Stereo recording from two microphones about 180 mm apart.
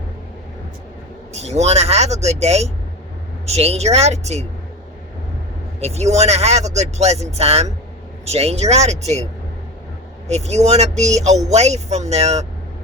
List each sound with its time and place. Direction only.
1.3 s speech: 35° right (ahead or behind)
5.8 s speech: 35° right (ahead or behind)
10.2 s speech: 40° right (ahead or behind)